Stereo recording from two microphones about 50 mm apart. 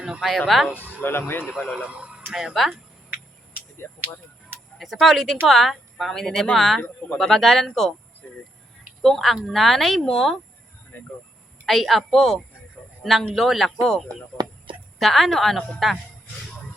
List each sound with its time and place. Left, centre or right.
0.2 s speech: centre
1.0 s speech: left
1.5 s speech: centre
1.8 s a sound: right
2.3 s speech: centre
3.8 s speech: left
4.8 s speech: centre
9.0 s speech: centre
10.9 s speech: left
11.6 s a man's voice: centre